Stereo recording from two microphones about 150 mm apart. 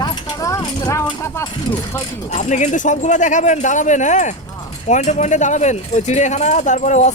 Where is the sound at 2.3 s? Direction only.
55° left (ahead or behind).